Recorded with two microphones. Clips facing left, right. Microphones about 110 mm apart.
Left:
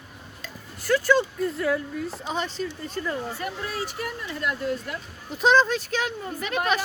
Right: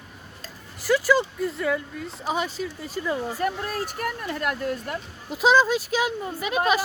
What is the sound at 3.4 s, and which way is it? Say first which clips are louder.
Speech: right 4 dB; 45° right (ahead or behind).